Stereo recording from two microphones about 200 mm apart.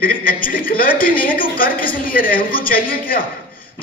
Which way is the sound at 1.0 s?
45° left (ahead or behind).